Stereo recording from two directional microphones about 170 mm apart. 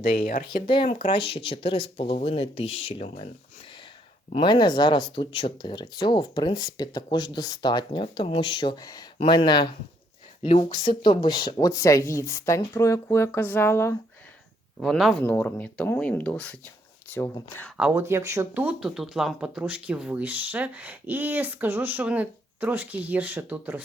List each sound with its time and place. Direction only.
0.0 s speech: 55° left (ahead or behind)
0.7 s speech: 30° left (ahead or behind)
4.3 s speech: 30° left (ahead or behind); by 14.0 s 15° left (ahead or behind)
14.8 s speech: centre (ahead or behind)
15.2 s speech: 10° left (ahead or behind)
17.7 s speech: 10° right (ahead or behind)